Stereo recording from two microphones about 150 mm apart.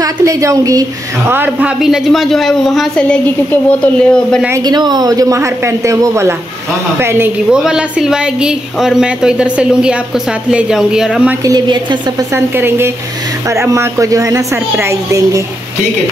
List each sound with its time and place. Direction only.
0.0 s a woman's voice: 20° right (ahead or behind)
1.3 s speech: 10° right (ahead or behind); by 4.4 s 5° left (ahead or behind)
4.6 s a woman's voice: 25° right (ahead or behind)
7.5 s speech: 5° right (ahead or behind)
11.4 s a woman's voice: 30° right (ahead or behind)
12.5 s a woman's voice: 15° right (ahead or behind)